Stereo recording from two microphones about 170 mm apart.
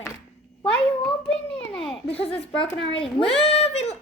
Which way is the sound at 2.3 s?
35° left (ahead or behind).